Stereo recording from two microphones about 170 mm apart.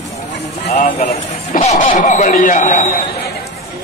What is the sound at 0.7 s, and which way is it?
Speech, 40° left (ahead or behind).